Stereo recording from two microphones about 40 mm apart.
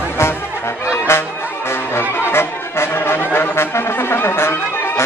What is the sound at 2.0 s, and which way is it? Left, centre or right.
Brass instrument, left.